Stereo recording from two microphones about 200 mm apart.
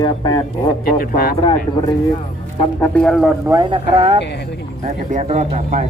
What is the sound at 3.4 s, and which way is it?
Speech, 20° right (ahead or behind).